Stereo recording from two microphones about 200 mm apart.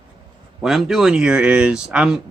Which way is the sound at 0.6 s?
Centre (ahead or behind).